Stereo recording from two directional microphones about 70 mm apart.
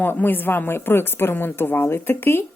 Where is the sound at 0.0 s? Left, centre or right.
Left.